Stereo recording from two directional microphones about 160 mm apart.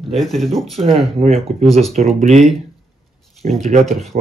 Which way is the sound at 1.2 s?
40° right (ahead or behind).